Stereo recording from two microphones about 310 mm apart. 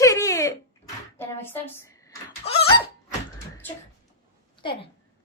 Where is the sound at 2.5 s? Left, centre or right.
Centre.